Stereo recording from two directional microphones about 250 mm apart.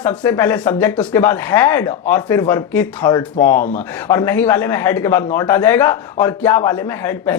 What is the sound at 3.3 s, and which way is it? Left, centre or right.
Speech, left.